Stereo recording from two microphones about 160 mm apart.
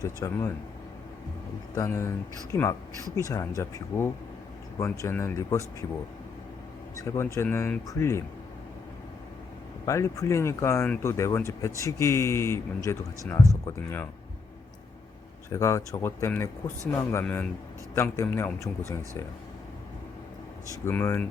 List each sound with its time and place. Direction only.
0.0 s speech: 20° left (ahead or behind)
1.7 s speech: 20° left (ahead or behind)
7.0 s speech: 20° left (ahead or behind)
9.8 s speech: 20° left (ahead or behind)
15.4 s speech: 20° left (ahead or behind)
20.8 s speech: 15° left (ahead or behind)